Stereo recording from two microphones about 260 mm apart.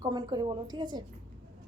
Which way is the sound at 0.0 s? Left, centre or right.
Centre.